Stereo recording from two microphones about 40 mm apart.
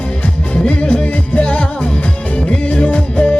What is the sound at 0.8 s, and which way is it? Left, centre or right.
Music, left.